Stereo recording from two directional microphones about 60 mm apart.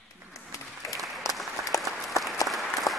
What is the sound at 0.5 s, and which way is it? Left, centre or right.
Applause, left.